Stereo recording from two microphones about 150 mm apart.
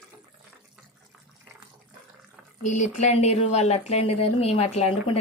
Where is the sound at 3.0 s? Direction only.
45° left (ahead or behind).